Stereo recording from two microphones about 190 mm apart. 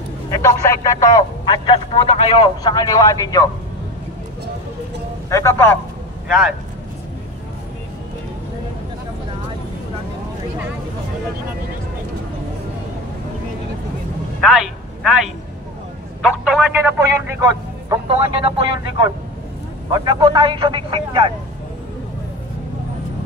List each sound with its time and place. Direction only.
0.3 s speech: 15° left (ahead or behind)
5.3 s a man's voice: 15° left (ahead or behind)
6.2 s speech: 5° right (ahead or behind)
14.4 s a woman's voice: centre (ahead or behind)
18.4 s speech: 30° right (ahead or behind)